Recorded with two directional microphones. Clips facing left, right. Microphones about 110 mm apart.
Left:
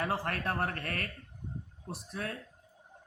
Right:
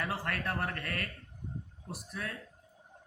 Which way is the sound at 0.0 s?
35° left (ahead or behind).